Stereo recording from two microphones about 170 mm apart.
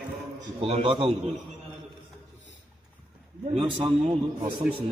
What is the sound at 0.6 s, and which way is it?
Speech, 35° right (ahead or behind).